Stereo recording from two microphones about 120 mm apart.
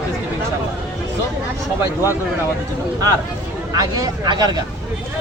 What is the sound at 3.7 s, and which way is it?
Speech, 30° right (ahead or behind).